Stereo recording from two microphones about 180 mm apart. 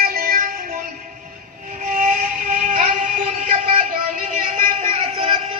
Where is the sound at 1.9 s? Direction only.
50° right (ahead or behind).